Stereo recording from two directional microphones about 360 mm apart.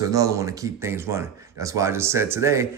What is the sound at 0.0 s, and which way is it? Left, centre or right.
Speech, centre.